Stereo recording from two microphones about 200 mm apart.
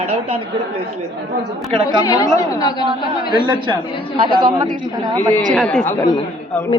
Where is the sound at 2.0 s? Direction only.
15° left (ahead or behind).